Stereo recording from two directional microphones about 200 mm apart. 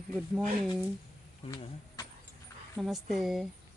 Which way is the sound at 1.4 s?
30° left (ahead or behind).